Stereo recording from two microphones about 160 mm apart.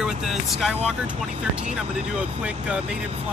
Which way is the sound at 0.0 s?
Centre (ahead or behind).